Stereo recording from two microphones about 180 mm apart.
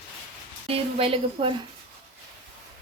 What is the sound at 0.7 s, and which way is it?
Speech, 30° right (ahead or behind).